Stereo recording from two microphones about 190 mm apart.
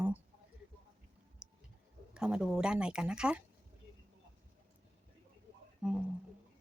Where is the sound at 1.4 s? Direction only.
5° right (ahead or behind).